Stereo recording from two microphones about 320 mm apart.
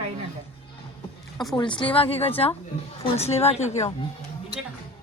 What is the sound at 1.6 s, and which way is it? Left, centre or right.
A woman's voice, centre.